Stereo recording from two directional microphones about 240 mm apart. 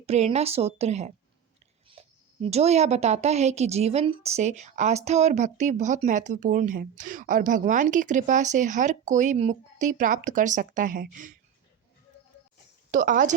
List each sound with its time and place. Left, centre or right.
0.0 s a woman's voice: right
12.9 s speech: right